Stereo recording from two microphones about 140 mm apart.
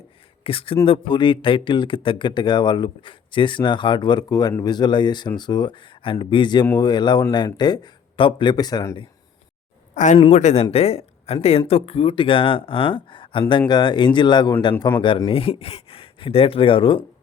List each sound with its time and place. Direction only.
0.4 s speech: 40° left (ahead or behind); by 9.0 s 25° left (ahead or behind)
9.9 s speech: 65° left (ahead or behind)
10.3 s speech: 50° left (ahead or behind); by 17.1 s 35° left (ahead or behind)